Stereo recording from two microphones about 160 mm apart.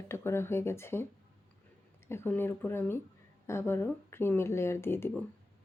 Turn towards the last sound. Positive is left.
turn(degrees=15)  # may be behind; listen again after turning